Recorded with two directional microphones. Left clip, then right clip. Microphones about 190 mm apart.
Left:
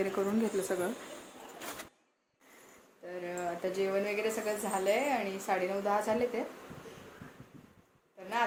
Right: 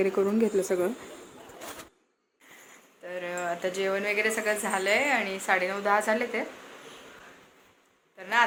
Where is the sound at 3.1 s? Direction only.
Centre (ahead or behind).